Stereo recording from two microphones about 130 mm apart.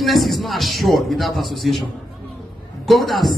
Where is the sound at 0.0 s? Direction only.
Centre (ahead or behind).